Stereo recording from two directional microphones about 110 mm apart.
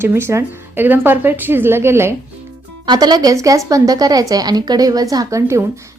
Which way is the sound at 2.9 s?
40° right (ahead or behind).